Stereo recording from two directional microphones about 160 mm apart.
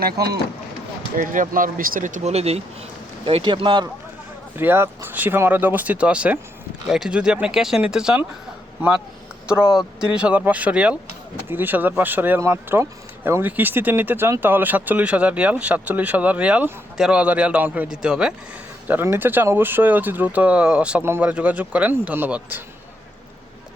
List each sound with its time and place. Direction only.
0.0 s speech: 80° right
1.1 s speech: 55° right (ahead or behind); by 3.8 s 30° right (ahead or behind)
4.5 s speech: 15° right (ahead or behind)
9.5 s speech: 5° right (ahead or behind)